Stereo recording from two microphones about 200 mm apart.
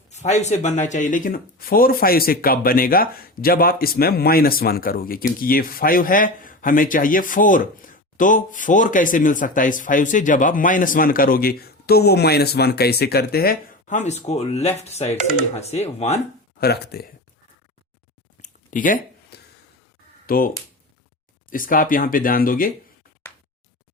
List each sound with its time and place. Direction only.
0.1 s speech: 35° left (ahead or behind)
16.6 s speech: 55° left (ahead or behind)
18.4 s a sound: 40° left (ahead or behind)
20.2 s speech: 45° left (ahead or behind)
21.5 s speech: 45° left (ahead or behind)